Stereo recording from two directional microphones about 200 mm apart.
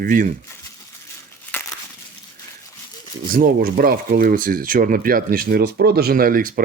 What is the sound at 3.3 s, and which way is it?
A man's voice, 45° right (ahead or behind).